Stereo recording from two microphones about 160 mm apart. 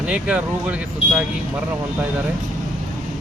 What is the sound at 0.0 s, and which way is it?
Speech, 5° right (ahead or behind).